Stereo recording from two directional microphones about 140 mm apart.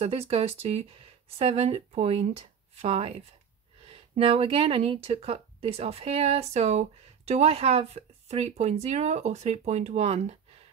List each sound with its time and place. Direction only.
0.0 s speech: 45° right (ahead or behind)
4.2 s speech: 45° right (ahead or behind)